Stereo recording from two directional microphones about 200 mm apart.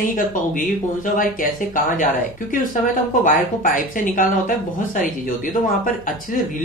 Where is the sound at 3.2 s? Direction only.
40° left (ahead or behind).